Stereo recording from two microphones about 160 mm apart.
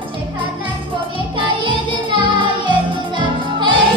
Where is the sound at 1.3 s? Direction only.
30° right (ahead or behind).